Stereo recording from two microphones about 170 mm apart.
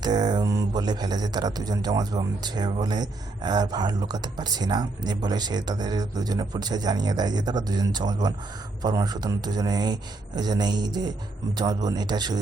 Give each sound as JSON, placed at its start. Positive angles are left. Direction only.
{"t": 0.0, "sound": "speech", "side_deg": -25}